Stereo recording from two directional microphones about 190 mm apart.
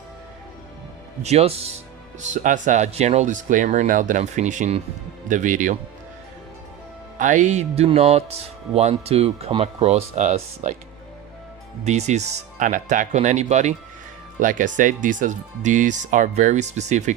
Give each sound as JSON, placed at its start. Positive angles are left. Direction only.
{"t": 1.2, "sound": "speech", "side_deg": -35}
{"t": 7.2, "sound": "speech", "side_deg": -40}
{"t": 11.9, "sound": "speech", "side_deg": -35}